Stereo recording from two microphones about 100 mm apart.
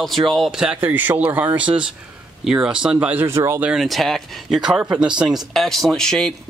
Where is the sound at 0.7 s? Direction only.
20° right (ahead or behind).